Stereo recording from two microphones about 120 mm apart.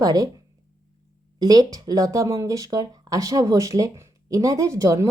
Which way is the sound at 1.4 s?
30° right (ahead or behind).